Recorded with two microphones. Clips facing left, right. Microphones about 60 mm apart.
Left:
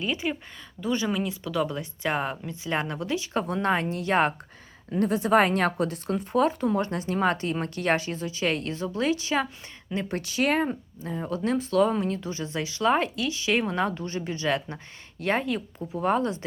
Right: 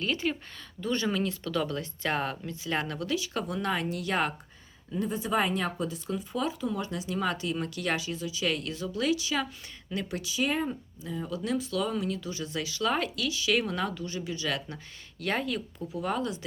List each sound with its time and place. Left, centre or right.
0.0 s speech: centre; by 4.4 s left
4.9 s a woman's voice: left
10.2 s speech: left
10.7 s speech: left